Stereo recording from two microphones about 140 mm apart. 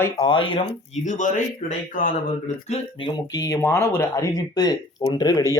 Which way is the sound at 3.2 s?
25° left (ahead or behind).